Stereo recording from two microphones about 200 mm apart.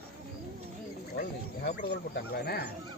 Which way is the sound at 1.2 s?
45° left (ahead or behind).